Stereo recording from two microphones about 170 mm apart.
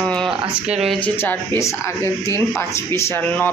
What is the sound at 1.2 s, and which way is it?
Speech, 15° left (ahead or behind).